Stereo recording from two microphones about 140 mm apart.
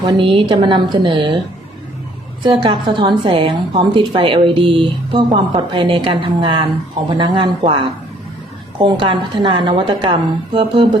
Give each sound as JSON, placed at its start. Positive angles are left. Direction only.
{"t": 0.0, "sound": "a woman's voice", "side_deg": -40}
{"t": 2.4, "sound": "a woman's voice", "side_deg": -35}